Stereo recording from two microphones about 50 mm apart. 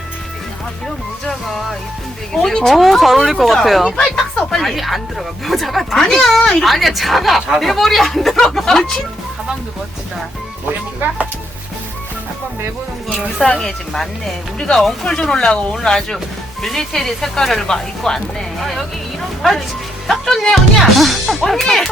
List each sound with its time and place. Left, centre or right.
2.3 s speech: centre
4.1 s speech: centre
4.6 s speech: centre
10.7 s speech: right
13.6 s speech: centre
18.6 s speech: centre